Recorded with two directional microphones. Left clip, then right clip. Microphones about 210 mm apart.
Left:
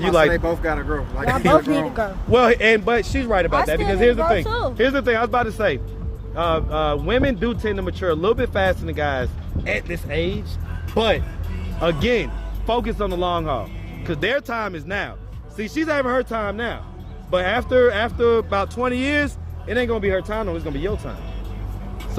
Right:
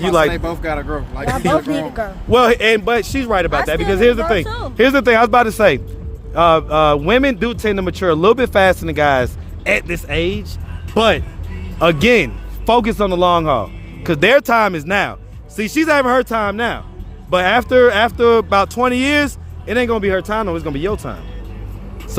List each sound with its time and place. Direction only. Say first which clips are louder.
0.0 s speech: right 2 dB; 40° right (ahead or behind)
1.5 s speech: left 1 dB; 5° right (ahead or behind)
2.3 s speech: right 3 dB; 40° right (ahead or behind)
4.4 s speech: left 3 dB; 5° left (ahead or behind)
4.8 s a man's voice: right 9 dB; 55° right (ahead or behind)